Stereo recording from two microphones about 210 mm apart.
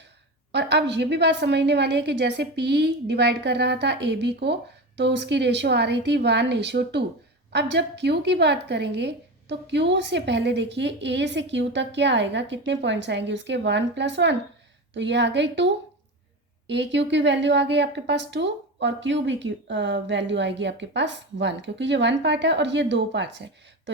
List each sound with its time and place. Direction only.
0.5 s a woman's voice: 55° right (ahead or behind)